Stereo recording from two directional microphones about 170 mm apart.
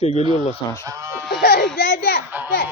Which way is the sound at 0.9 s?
20° right (ahead or behind).